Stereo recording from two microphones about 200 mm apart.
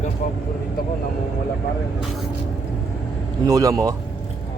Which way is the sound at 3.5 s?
15° right (ahead or behind).